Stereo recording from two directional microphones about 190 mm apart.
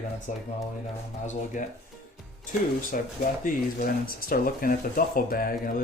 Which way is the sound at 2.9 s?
45° left (ahead or behind).